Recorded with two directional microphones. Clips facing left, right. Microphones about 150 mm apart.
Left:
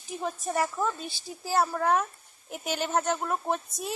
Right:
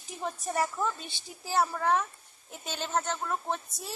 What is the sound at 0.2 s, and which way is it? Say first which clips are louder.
A woman's voice: left 2 dB; centre (ahead or behind).